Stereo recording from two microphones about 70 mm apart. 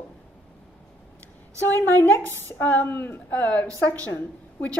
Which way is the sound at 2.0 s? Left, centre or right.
Left.